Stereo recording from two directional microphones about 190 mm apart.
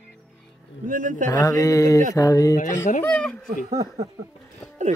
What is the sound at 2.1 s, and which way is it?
Speech, 20° left (ahead or behind).